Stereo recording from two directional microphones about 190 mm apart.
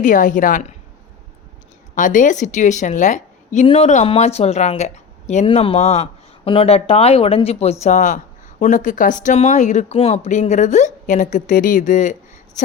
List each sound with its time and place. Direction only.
0.0 s a woman's voice: 45° left (ahead or behind)
2.0 s speech: 45° left (ahead or behind)